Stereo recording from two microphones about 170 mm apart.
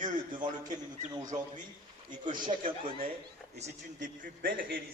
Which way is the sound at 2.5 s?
40° right (ahead or behind).